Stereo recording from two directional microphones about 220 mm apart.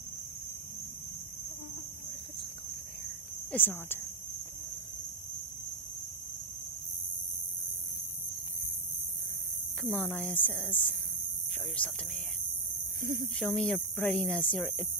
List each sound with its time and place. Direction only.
3.5 s speech: 10° left (ahead or behind)
9.8 s speech: 5° left (ahead or behind)
13.0 s speech: 40° right (ahead or behind)
13.4 s speech: 5° left (ahead or behind)